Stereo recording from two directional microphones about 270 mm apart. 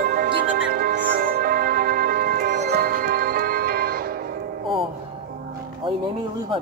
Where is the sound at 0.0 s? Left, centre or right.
Right.